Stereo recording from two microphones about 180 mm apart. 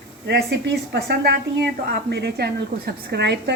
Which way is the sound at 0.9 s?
65° right (ahead or behind).